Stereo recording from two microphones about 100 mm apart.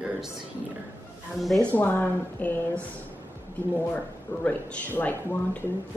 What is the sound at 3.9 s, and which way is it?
Speech, 15° left (ahead or behind).